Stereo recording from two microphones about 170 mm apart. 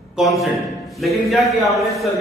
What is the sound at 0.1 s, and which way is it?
A man's voice, centre (ahead or behind).